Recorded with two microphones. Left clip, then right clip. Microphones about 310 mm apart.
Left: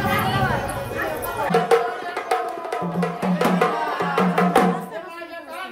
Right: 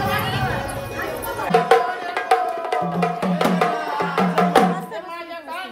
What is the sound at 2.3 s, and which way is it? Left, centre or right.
Music, centre.